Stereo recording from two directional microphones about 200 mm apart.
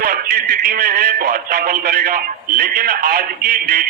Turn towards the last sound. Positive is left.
turn(degrees=-50)  # may be behind; listen again after turning